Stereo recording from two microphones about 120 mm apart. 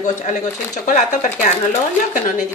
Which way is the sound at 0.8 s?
90° left.